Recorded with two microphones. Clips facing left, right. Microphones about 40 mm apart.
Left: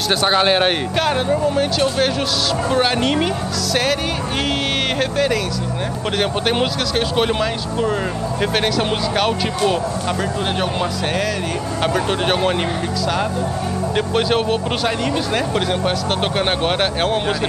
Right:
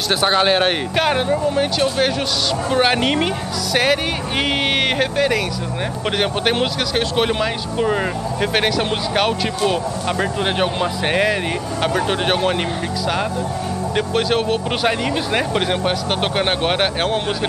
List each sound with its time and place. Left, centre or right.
0.1 s speech: centre
0.9 s speech: centre
10.6 s speech: centre
11.8 s speech: centre
13.9 s speech: centre
14.8 s speech: centre